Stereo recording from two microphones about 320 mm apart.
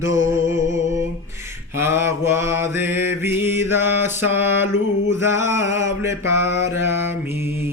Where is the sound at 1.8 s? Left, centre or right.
Centre.